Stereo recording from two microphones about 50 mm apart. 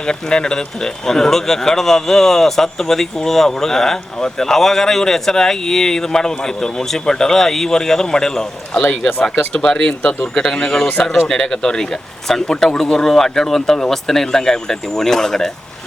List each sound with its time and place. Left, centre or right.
0.0 s speech: centre